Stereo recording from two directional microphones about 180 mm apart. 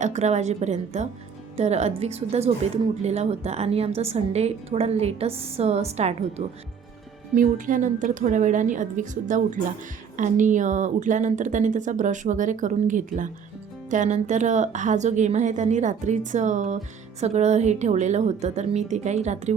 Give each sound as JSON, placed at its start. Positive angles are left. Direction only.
{"t": 0.0, "sound": "a woman's voice", "side_deg": -40}